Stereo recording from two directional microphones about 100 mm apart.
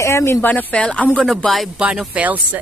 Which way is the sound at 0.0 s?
25° left (ahead or behind).